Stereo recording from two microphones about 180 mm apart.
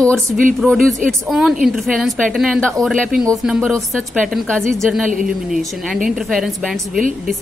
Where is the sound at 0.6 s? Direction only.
Centre (ahead or behind).